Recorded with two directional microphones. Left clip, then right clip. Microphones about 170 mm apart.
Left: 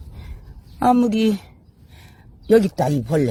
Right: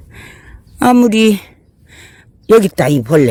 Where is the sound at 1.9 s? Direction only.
55° right (ahead or behind).